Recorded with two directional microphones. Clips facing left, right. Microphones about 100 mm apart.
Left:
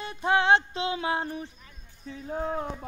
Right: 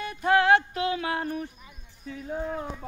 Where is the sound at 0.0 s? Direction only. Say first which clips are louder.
Right 2 dB; 25° left (ahead or behind).